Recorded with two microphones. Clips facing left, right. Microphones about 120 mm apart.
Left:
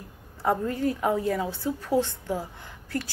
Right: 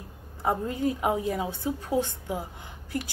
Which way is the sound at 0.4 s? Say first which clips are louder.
Left 2 dB; 20° right (ahead or behind).